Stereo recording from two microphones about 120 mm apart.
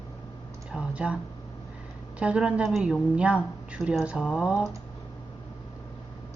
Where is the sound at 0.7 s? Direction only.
10° right (ahead or behind).